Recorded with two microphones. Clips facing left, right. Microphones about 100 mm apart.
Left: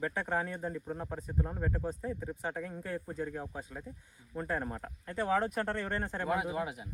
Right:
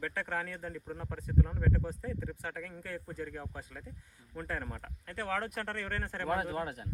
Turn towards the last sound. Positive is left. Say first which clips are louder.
# left 1 dB
turn(degrees=5)  # may be behind; listen again after turning